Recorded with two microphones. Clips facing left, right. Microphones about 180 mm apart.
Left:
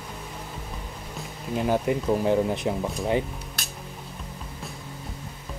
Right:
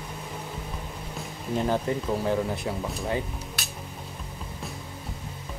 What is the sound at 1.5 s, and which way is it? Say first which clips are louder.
Speech: left 2 dB; 10° left (ahead or behind).